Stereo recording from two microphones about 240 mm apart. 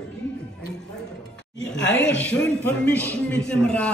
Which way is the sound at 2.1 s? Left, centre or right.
Centre.